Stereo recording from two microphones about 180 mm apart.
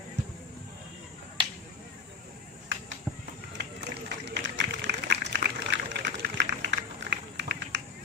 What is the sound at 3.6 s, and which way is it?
Run, 70° right (ahead or behind).